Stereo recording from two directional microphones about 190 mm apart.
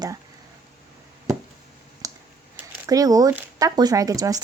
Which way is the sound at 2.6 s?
15° right (ahead or behind).